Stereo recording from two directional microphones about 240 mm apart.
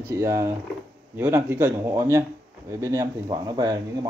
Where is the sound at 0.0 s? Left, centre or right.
Centre.